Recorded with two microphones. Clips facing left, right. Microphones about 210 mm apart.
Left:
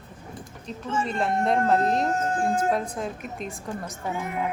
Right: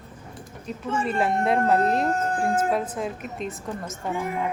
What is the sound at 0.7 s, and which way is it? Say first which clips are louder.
A woman's voice: right 2 dB; 10° right (ahead or behind).